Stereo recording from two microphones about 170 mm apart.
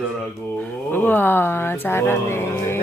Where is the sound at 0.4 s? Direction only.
10° left (ahead or behind).